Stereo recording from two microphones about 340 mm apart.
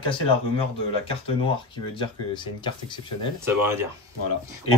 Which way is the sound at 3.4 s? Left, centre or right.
Centre.